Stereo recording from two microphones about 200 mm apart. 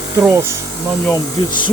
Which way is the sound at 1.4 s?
25° left (ahead or behind).